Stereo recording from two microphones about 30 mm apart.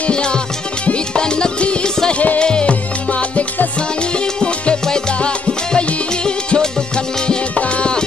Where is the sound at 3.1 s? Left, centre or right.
Left.